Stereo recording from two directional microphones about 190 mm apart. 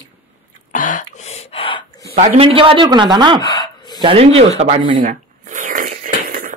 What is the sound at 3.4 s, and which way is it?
Gasp, 20° left (ahead or behind).